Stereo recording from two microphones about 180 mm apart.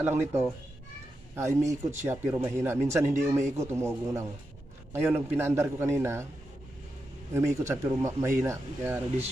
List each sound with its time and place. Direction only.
0.0 s speech: 15° right (ahead or behind)
7.3 s speech: 15° right (ahead or behind)